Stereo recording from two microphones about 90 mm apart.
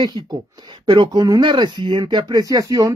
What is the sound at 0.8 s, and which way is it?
Speech, 60° right (ahead or behind).